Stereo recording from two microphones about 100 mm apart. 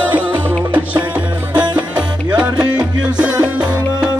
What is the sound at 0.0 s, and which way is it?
Music, 15° right (ahead or behind).